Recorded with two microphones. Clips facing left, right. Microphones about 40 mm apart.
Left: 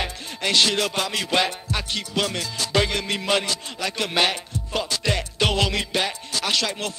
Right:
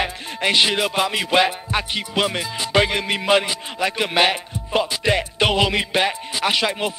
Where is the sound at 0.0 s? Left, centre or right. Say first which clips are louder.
Right 5 dB; right.